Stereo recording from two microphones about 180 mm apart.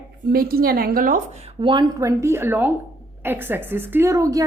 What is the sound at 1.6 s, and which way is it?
A woman's voice, 25° right (ahead or behind).